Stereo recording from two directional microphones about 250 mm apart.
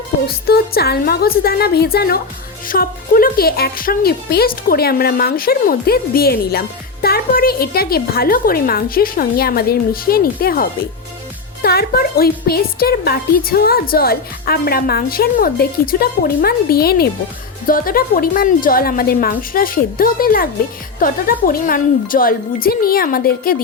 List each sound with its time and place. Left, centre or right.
0.4 s speech: left